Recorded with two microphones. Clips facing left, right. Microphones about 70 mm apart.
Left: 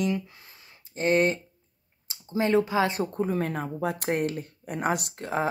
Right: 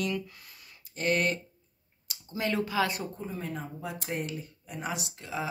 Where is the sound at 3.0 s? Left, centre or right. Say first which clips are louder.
Left 10 dB; left.